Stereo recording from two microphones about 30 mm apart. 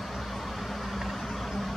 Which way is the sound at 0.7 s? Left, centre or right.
Centre.